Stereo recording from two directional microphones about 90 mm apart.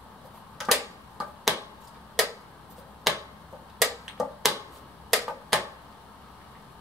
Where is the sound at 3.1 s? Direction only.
Centre (ahead or behind).